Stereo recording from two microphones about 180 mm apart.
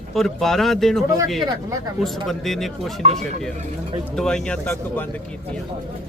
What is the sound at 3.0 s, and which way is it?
Speech, 35° right (ahead or behind).